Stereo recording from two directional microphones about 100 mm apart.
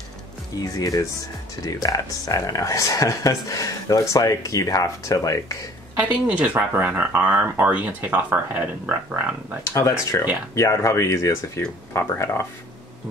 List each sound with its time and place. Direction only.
0.6 s speech: 35° left (ahead or behind)
5.9 s speech: 15° right (ahead or behind)
9.7 s speech: 30° left (ahead or behind)